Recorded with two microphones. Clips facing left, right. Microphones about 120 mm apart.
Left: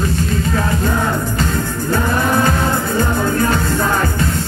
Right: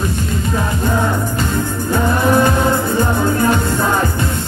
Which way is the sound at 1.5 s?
15° right (ahead or behind).